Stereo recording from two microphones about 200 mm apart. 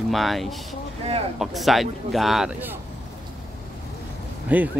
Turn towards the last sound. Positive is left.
turn(degrees=-10)  # may be behind; listen again after turning